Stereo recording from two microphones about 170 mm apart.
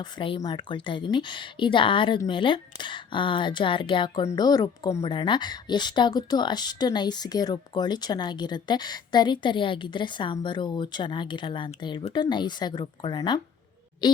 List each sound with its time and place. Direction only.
0.0 s a woman's voice: 30° left (ahead or behind)